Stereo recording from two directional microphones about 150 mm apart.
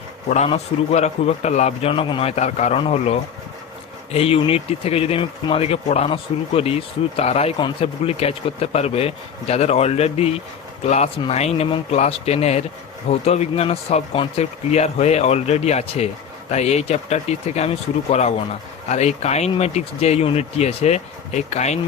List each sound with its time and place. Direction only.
0.3 s speech: 45° left (ahead or behind)